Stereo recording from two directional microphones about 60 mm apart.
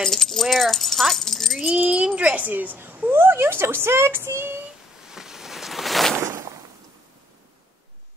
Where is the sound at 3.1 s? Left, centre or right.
Right.